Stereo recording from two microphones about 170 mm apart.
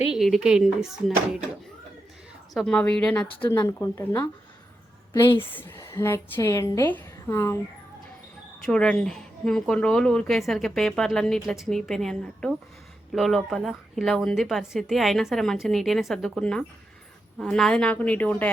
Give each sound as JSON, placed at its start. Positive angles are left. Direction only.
{"t": 0.1, "sound": "a woman's voice", "side_deg": 0}
{"t": 2.6, "sound": "a woman's voice", "side_deg": 5}
{"t": 3.4, "sound": "a woman's voice", "side_deg": 15}
{"t": 5.4, "sound": "a woman's voice", "side_deg": 10}
{"t": 8.6, "sound": "a woman's voice", "side_deg": 5}